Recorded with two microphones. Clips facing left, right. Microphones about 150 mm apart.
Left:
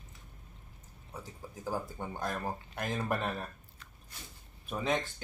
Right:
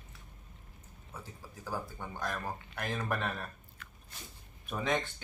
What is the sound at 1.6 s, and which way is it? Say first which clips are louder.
Speech: left 3 dB; 15° left (ahead or behind).